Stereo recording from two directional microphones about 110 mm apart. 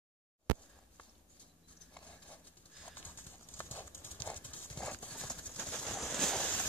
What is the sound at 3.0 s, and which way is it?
Clip-clop, 15° left (ahead or behind).